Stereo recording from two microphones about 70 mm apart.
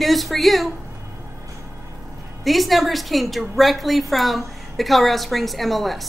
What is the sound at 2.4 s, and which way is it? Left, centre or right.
A woman's voice, centre.